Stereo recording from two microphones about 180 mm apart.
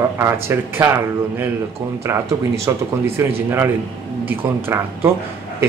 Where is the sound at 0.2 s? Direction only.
15° right (ahead or behind).